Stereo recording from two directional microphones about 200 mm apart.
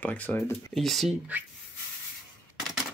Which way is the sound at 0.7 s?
Centre (ahead or behind).